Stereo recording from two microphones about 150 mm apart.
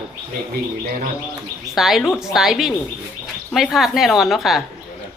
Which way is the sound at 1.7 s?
Centre (ahead or behind).